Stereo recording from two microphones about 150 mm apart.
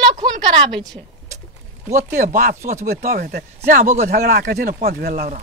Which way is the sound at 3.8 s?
55° right (ahead or behind).